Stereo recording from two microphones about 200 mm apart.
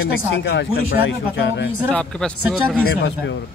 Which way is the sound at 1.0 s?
60° left (ahead or behind).